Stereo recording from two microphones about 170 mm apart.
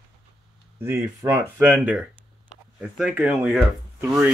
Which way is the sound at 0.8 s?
15° right (ahead or behind).